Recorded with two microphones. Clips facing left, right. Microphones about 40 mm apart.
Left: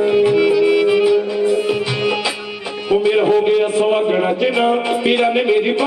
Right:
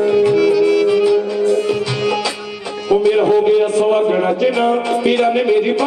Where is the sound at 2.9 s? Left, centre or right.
Centre.